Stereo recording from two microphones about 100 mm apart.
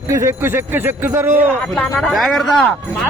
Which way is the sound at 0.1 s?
25° right (ahead or behind).